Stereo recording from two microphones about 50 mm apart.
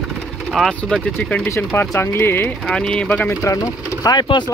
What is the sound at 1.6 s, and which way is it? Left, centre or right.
Speech, left.